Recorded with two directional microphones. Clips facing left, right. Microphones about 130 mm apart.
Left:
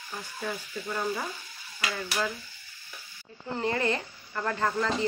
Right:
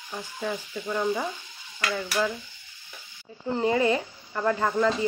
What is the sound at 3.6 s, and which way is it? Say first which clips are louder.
Speech: right 5 dB; 10° right (ahead or behind).